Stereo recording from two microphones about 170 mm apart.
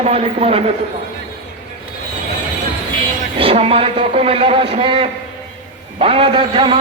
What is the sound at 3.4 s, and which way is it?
A man's voice, 35° right (ahead or behind).